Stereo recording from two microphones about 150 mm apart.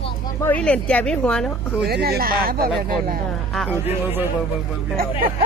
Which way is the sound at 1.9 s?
90° right.